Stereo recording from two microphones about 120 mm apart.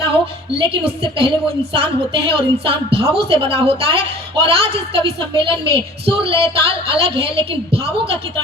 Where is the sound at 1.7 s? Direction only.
50° right (ahead or behind).